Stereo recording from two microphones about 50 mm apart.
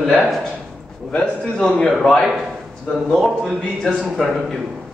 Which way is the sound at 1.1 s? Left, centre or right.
Centre.